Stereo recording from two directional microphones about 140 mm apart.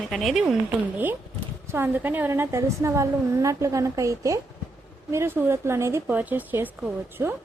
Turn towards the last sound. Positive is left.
turn(degrees=-10)  # may be behind; listen again after turning